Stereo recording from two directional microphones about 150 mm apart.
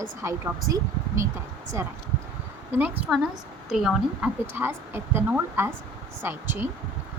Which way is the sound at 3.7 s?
Centre (ahead or behind).